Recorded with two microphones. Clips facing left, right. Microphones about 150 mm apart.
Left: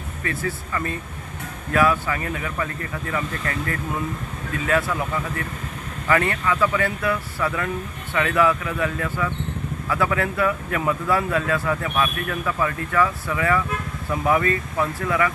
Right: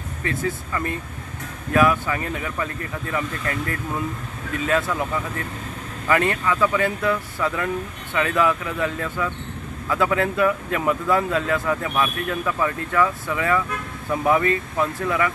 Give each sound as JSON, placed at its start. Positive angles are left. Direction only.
{"t": 0.2, "sound": "speech", "side_deg": -20}
{"t": 6.0, "sound": "speech", "side_deg": -20}